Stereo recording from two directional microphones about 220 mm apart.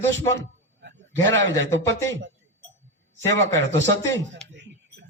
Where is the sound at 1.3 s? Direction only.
55° right (ahead or behind).